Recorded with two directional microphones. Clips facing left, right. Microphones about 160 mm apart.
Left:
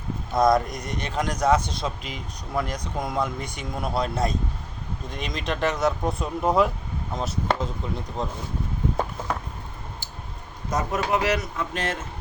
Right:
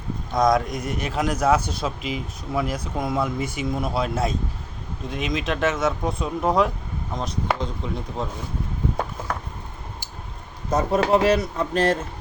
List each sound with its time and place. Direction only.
0.3 s a man's voice: centre (ahead or behind)
10.7 s speech: 30° right (ahead or behind)